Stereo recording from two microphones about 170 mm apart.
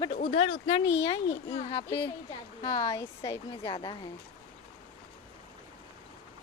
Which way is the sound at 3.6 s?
30° left (ahead or behind).